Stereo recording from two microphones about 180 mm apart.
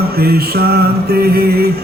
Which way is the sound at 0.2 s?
60° right (ahead or behind).